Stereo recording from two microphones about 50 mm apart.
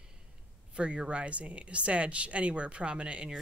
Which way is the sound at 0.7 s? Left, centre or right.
Right.